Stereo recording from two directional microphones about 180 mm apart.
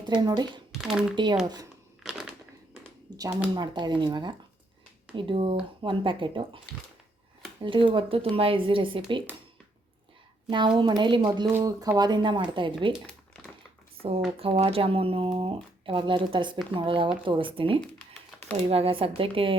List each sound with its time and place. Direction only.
0.1 s speech: 25° right (ahead or behind)
0.7 s a sound: centre (ahead or behind)
1.1 s speech: 25° right (ahead or behind)
2.0 s a sound: 5° right (ahead or behind)
3.2 s speech: 20° right (ahead or behind)
7.6 s speech: 30° right (ahead or behind)
10.8 s speech: 25° right (ahead or behind)
14.3 s speech: 30° right (ahead or behind)